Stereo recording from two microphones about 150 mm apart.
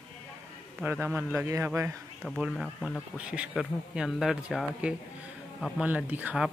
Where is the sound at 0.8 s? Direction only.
10° right (ahead or behind).